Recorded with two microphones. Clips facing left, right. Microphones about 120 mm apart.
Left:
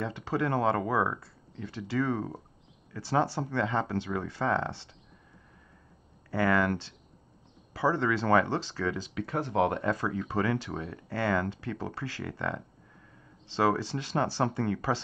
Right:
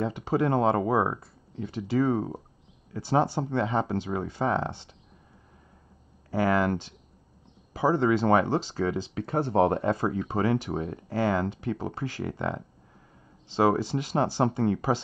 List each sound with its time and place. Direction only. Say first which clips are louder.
0.0 s speech: right 5 dB; 15° right (ahead or behind)
6.3 s speech: right 2 dB; 15° right (ahead or behind)
9.1 s speech: right 4 dB; 35° right (ahead or behind)